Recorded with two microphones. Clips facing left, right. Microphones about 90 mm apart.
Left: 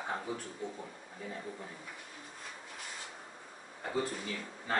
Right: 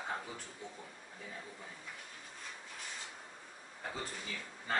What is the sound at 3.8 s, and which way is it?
Speech, 5° left (ahead or behind).